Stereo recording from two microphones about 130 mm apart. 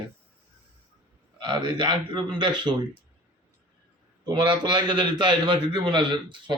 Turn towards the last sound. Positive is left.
turn(degrees=-40)  # may be behind; listen again after turning